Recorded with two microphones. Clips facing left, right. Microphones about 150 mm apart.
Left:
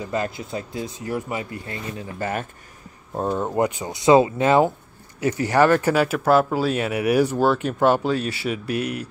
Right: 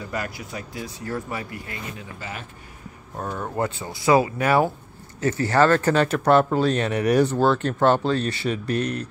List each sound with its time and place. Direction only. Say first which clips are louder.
0.0 s speech: left 4 dB; 25° left (ahead or behind)
2.1 s speech: left 13 dB; 50° left (ahead or behind)
3.2 s speech: left 5 dB; 25° left (ahead or behind)